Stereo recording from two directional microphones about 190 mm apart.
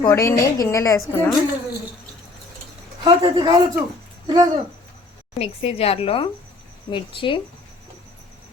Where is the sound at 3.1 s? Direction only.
25° right (ahead or behind).